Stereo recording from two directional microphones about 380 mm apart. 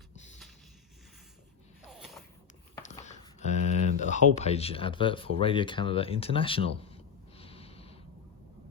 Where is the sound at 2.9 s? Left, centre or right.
Centre.